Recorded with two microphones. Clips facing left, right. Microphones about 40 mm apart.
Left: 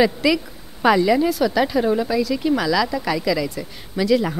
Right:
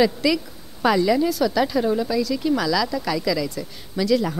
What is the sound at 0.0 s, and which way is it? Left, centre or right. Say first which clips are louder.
A woman's voice: left 2 dB; left.